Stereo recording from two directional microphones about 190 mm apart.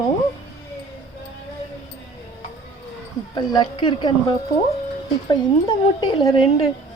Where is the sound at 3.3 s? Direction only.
20° left (ahead or behind).